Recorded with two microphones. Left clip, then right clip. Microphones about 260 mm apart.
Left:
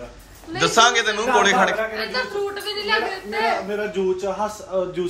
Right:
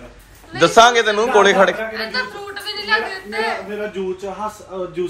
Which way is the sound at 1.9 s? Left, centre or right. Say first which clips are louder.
Right 2 dB; left.